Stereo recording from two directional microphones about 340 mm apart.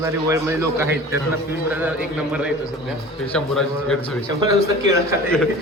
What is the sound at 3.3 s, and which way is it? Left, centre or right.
Speech, centre.